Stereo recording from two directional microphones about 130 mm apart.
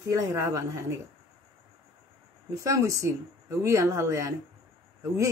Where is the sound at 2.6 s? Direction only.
25° right (ahead or behind).